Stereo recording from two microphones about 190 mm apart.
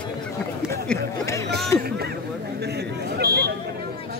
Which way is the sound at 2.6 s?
60° right (ahead or behind).